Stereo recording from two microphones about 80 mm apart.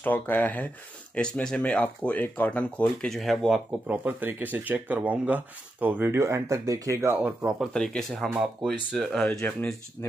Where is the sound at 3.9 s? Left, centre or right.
Right.